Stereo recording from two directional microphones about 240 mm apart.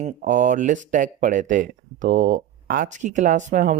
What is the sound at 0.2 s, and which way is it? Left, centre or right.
Speech, right.